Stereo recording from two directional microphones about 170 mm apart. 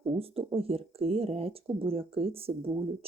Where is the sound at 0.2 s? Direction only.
35° right (ahead or behind).